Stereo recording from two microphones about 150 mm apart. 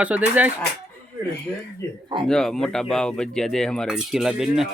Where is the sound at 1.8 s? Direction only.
15° left (ahead or behind).